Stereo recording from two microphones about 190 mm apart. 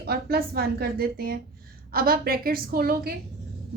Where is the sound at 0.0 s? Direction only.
55° right (ahead or behind).